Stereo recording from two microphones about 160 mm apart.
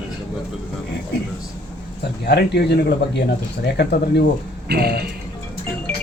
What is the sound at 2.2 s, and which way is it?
Speech, 90° left.